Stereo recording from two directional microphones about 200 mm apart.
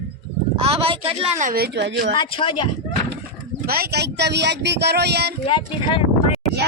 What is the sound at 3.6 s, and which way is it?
Speech, 50° right (ahead or behind).